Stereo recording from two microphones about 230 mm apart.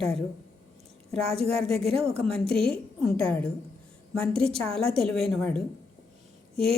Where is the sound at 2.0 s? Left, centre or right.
Centre.